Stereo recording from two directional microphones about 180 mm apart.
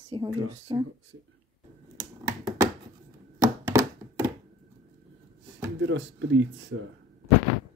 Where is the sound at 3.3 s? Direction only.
15° right (ahead or behind).